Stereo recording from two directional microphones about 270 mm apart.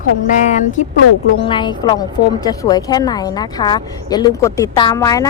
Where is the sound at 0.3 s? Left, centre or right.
Left.